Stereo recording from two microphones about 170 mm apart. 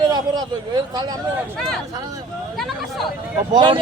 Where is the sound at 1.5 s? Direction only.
5° left (ahead or behind).